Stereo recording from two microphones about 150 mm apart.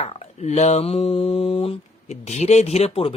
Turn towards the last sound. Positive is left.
turn(degrees=40)  # may be behind; listen again after turning